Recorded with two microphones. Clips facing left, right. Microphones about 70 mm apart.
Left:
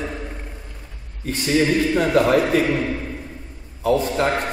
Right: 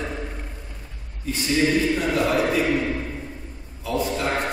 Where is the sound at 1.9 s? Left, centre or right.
Left.